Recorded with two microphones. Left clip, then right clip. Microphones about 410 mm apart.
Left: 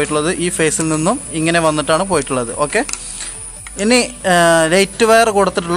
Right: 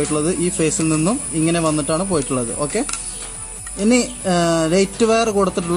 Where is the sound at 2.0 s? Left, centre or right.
Left.